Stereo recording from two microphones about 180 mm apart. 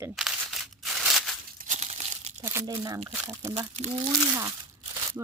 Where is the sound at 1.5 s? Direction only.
45° right (ahead or behind).